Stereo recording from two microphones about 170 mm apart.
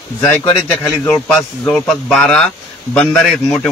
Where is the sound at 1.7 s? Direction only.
5° left (ahead or behind).